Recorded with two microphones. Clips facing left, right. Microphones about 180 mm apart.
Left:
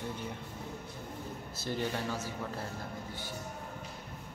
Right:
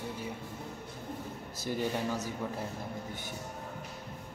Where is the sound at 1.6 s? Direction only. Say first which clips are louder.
Right 2 dB; 15° right (ahead or behind).